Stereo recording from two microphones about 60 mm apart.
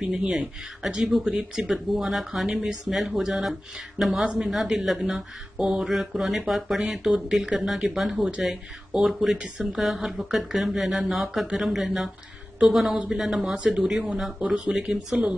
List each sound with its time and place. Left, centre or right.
0.0 s speech: centre
4.2 s speech: centre
4.5 s a woman's voice: centre